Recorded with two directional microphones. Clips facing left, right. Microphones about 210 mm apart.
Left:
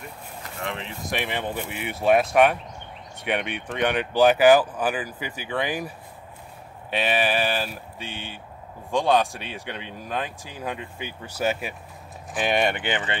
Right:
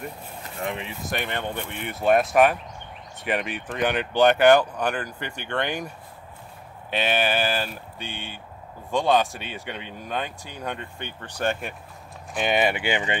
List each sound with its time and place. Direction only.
0.4 s speech: 20° right (ahead or behind)